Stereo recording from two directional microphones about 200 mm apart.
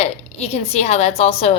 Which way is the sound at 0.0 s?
30° left (ahead or behind).